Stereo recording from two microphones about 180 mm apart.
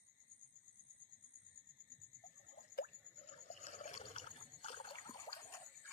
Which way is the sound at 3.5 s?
40° left (ahead or behind).